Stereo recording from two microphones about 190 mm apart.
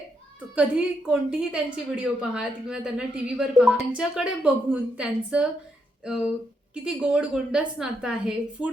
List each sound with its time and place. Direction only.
0.5 s a woman's voice: 5° right (ahead or behind)
6.8 s a woman's voice: 5° right (ahead or behind)